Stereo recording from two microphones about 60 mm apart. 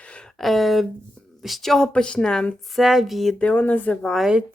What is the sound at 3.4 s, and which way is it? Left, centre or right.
Speech, left.